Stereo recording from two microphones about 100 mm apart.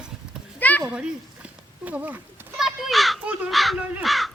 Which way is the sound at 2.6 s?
Centre (ahead or behind).